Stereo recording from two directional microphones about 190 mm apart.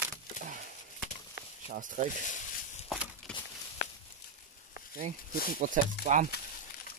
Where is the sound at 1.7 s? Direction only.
45° right (ahead or behind).